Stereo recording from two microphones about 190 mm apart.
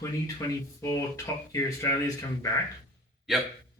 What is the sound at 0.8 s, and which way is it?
Speech, 15° left (ahead or behind).